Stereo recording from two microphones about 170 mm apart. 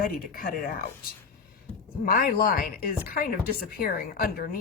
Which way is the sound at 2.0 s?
55° left (ahead or behind).